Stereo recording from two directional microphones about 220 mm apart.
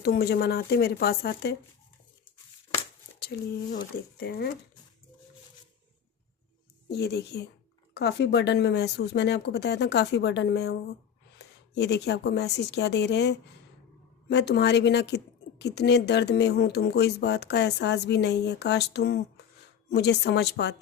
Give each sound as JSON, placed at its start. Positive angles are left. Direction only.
{"t": 0.0, "sound": "a woman's voice", "side_deg": 45}
{"t": 3.2, "sound": "a woman's voice", "side_deg": 45}
{"t": 6.8, "sound": "a woman's voice", "side_deg": 45}